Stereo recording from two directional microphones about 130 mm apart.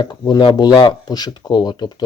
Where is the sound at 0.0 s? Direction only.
35° left (ahead or behind).